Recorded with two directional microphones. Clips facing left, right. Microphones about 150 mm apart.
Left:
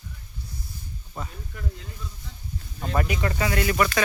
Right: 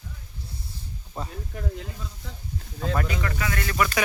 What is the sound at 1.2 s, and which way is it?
Speech, 30° right (ahead or behind).